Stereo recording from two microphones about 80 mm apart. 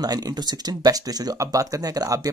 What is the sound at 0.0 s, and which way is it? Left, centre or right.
Speech, right.